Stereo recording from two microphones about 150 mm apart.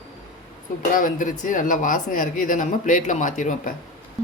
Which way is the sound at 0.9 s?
60° left (ahead or behind).